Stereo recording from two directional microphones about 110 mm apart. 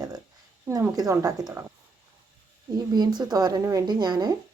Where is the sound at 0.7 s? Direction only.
20° right (ahead or behind).